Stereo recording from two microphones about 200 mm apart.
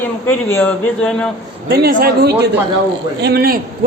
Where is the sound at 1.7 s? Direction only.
50° right (ahead or behind).